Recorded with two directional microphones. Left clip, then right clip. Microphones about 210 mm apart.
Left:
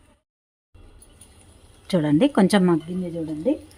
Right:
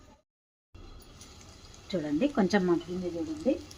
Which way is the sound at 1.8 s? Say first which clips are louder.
Left 10 dB; 55° left (ahead or behind).